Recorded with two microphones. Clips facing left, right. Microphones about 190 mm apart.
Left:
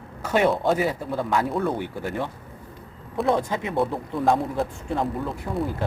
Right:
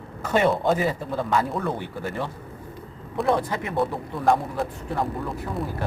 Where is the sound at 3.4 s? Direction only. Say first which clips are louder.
Left 1 dB; 20° left (ahead or behind).